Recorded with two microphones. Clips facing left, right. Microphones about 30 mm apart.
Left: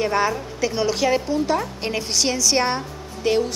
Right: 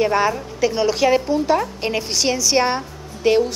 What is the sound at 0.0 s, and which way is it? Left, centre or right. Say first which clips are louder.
Speech: right 3 dB; centre.